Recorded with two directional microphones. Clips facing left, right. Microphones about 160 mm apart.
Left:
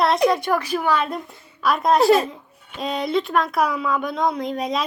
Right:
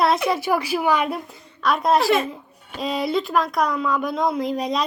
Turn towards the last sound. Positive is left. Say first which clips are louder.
# right 1 dB
turn(degrees=0)  # may be behind; listen again after turning